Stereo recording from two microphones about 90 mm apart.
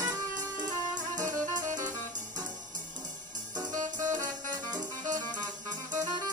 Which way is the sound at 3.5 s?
40° right (ahead or behind).